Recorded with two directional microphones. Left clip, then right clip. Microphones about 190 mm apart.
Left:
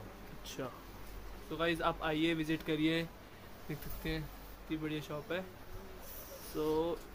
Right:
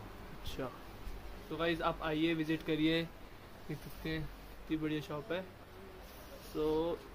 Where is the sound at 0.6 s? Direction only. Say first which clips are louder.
Right 1 dB; centre (ahead or behind).